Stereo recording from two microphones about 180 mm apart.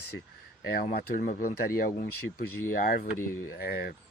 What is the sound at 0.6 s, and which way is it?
Speech, 55° left (ahead or behind).